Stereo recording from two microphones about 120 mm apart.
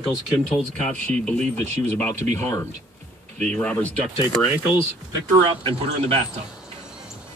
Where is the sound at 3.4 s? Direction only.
10° left (ahead or behind).